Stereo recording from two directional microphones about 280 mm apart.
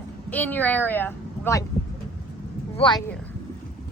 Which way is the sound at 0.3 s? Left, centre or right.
Centre.